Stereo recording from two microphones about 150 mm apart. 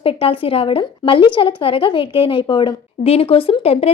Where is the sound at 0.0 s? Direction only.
40° left (ahead or behind).